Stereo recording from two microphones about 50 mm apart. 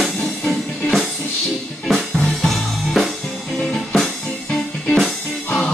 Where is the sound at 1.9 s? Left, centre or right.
Centre.